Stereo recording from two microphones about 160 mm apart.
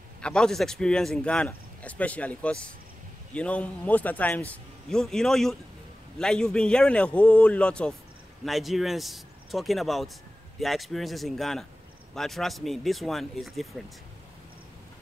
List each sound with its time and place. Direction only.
0.2 s a man's voice: 5° left (ahead or behind)